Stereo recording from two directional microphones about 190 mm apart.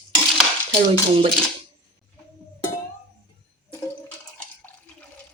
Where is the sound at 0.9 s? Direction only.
30° right (ahead or behind).